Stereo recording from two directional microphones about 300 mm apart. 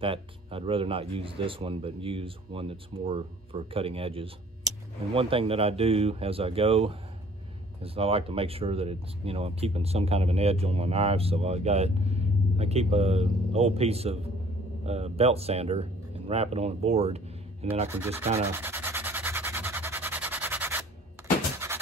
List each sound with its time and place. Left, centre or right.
0.0 s speech: centre
17.8 s sanding: centre